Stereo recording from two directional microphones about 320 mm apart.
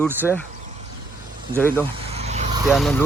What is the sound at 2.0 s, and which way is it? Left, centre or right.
Vehicle, centre.